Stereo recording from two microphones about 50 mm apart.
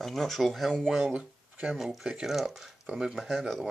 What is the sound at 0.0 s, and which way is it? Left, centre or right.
Speech, centre.